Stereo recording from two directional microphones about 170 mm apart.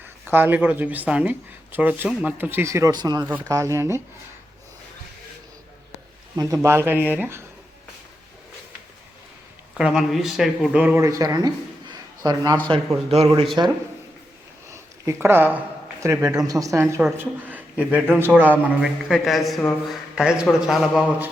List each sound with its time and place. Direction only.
0.3 s speech: 10° right (ahead or behind)
6.3 s speech: 20° right (ahead or behind)
9.7 s a man's voice: 5° right (ahead or behind); by 12.5 s 25° right (ahead or behind)
13.1 s speech: 35° right (ahead or behind)
15.0 s speech: 15° right (ahead or behind)